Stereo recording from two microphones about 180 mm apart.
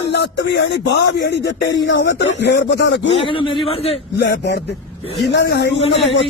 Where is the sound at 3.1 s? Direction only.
30° left (ahead or behind).